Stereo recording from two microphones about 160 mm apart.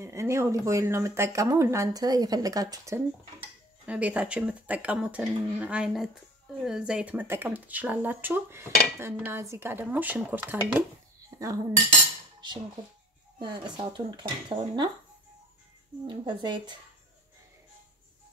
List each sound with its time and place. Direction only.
0.0 s speech: 15° right (ahead or behind)
3.8 s speech: 10° right (ahead or behind)
11.2 s dishes: 20° right (ahead or behind)
13.4 s speech: 30° right (ahead or behind)
16.1 s speech: 30° right (ahead or behind)